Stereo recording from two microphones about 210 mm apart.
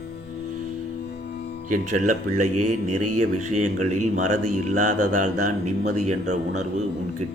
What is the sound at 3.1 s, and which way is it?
Speech, 35° right (ahead or behind).